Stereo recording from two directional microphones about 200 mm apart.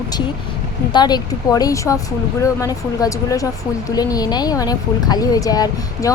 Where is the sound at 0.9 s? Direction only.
20° left (ahead or behind).